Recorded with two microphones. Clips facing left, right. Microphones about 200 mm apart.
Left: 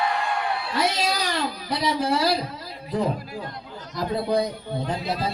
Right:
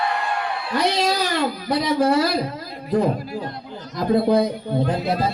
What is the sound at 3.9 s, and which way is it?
Speech, 50° right (ahead or behind).